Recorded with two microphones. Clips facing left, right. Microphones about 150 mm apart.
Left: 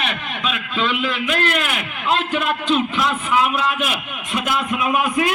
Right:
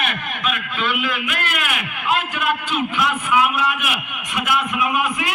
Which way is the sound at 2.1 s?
30° left (ahead or behind).